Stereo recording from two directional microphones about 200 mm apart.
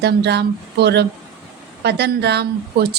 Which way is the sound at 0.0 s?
55° right (ahead or behind).